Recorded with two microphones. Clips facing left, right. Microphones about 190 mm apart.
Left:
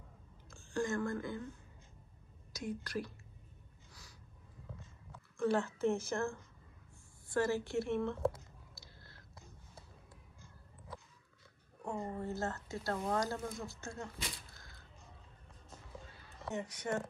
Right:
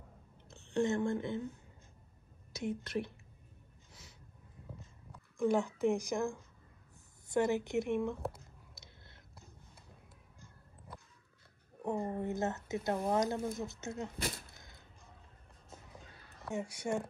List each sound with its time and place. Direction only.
0.5 s a woman's voice: 25° right (ahead or behind)
2.5 s a woman's voice: 25° right (ahead or behind)
5.4 s a woman's voice: 15° right (ahead or behind)
8.7 s a sound: 20° right (ahead or behind)
11.8 s speech: 15° right (ahead or behind)
14.1 s speech: 55° right (ahead or behind)
16.5 s a woman's voice: 10° right (ahead or behind)